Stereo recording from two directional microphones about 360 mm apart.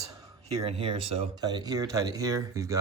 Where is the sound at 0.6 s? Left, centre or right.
Centre.